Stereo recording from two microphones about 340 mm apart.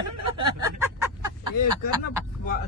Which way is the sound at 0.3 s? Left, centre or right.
Centre.